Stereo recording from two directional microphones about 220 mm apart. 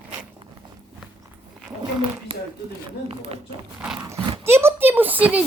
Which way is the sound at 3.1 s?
25° right (ahead or behind).